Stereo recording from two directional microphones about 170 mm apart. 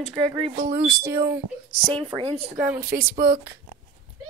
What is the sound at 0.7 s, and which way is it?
Speech, 15° right (ahead or behind).